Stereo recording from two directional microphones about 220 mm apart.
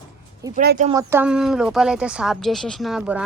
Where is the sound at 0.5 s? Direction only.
40° right (ahead or behind).